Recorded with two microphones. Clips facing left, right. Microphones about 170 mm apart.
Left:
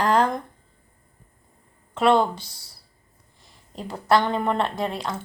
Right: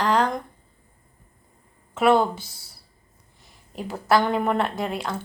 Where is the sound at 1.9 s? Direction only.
5° right (ahead or behind).